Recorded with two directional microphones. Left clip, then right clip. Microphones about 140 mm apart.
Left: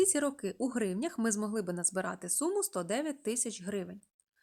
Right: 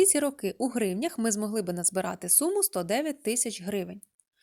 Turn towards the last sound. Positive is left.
turn(degrees=-30)  # may be behind; listen again after turning